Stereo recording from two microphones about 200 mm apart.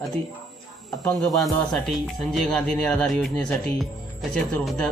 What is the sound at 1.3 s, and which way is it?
A man's voice, centre (ahead or behind).